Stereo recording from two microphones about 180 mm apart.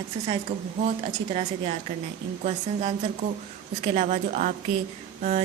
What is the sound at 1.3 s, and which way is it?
Speech, 35° right (ahead or behind).